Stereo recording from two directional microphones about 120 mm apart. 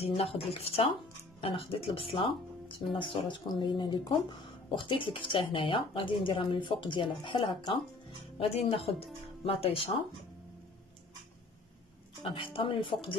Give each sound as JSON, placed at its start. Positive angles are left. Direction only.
{"t": 0.0, "sound": "a woman's voice", "side_deg": 55}
{"t": 8.4, "sound": "a woman's voice", "side_deg": 55}
{"t": 12.2, "sound": "a woman's voice", "side_deg": 45}